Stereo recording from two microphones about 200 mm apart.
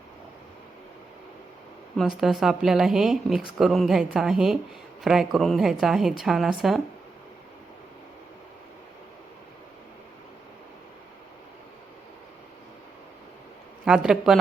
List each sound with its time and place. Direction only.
2.0 s a woman's voice: centre (ahead or behind)
13.8 s a woman's voice: 5° right (ahead or behind)